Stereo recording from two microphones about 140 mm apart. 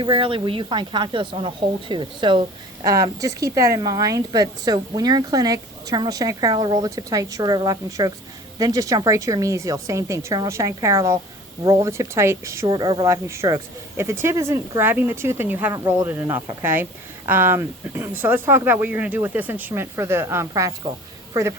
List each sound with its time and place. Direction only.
0.0 s speech: 40° right (ahead or behind)
2.8 s a woman's voice: 25° right (ahead or behind)